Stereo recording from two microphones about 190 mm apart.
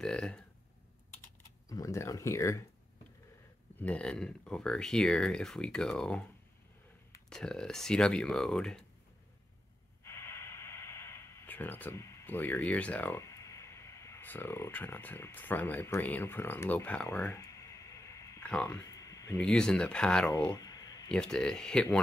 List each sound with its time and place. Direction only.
0.0 s speech: 5° left (ahead or behind)
1.7 s speech: 15° left (ahead or behind)
3.7 s speech: 5° left (ahead or behind)
7.2 s speech: 5° left (ahead or behind)
10.0 s a sound: 15° left (ahead or behind)
19.3 s speech: 5° left (ahead or behind)
20.2 s a sound: 20° left (ahead or behind)
21.1 s speech: 5° left (ahead or behind)